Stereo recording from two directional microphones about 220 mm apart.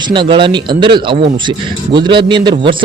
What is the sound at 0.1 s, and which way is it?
A man's voice, 20° right (ahead or behind).